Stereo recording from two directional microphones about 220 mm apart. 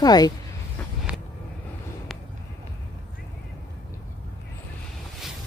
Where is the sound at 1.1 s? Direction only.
5° right (ahead or behind).